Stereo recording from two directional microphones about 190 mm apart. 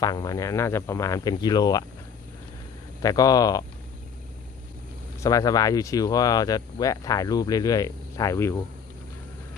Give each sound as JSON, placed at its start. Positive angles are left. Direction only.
{"t": 0.0, "sound": "speech", "side_deg": 20}
{"t": 3.0, "sound": "speech", "side_deg": 20}
{"t": 5.2, "sound": "speech", "side_deg": 20}